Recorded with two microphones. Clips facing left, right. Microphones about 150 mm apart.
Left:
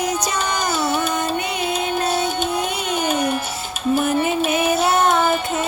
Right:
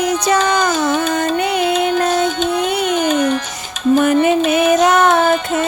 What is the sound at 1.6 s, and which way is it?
Music, 70° right (ahead or behind).